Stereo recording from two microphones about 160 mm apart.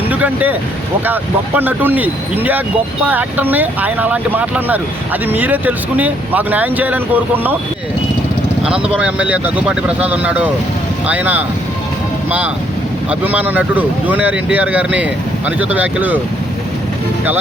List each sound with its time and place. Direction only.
0.1 s speech: 10° right (ahead or behind)
3.1 s speech: 10° right (ahead or behind)
9.0 s speech: 5° right (ahead or behind)
13.1 s speech: 10° right (ahead or behind)